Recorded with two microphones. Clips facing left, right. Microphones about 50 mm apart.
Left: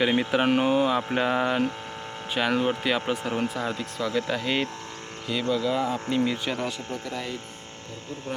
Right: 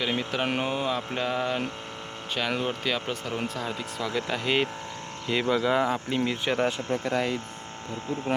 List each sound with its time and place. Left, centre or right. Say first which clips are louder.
0.0 s mantra: left 5 dB; centre
2.3 s speech: left 4 dB; centre
5.3 s speech: right 1 dB; right
6.1 s speech: left 1 dB; centre